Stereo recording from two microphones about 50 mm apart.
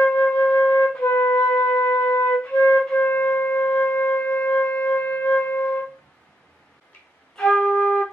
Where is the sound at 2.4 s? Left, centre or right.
Left.